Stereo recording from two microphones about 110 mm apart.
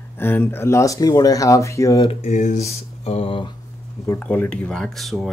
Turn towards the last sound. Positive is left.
turn(degrees=0)  # may be behind; listen again after turning